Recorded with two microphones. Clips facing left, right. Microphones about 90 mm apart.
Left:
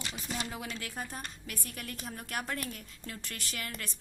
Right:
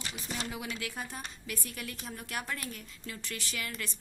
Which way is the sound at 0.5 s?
35° left (ahead or behind).